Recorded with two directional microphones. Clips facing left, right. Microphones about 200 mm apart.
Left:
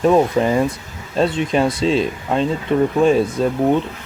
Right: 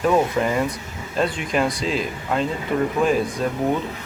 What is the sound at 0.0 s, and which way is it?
Speech, 30° left (ahead or behind).